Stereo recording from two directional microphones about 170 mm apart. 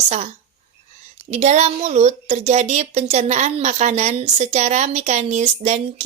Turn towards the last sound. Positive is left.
turn(degrees=-45)  # may be behind; listen again after turning